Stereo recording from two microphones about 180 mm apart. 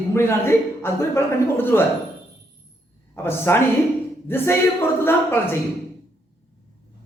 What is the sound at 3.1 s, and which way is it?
A man's voice, 15° left (ahead or behind).